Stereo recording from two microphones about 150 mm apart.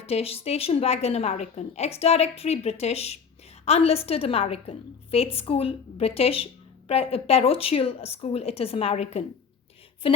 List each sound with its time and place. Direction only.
0.0 s a woman's voice: 40° left (ahead or behind)